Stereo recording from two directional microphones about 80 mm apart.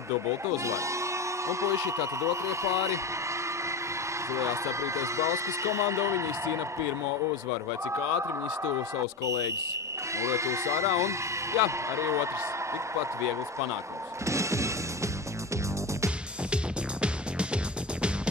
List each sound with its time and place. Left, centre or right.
0.7 s speech: right
4.3 s a man's voice: right
9.2 s a man's voice: right
14.2 s music: right
17.0 s music: centre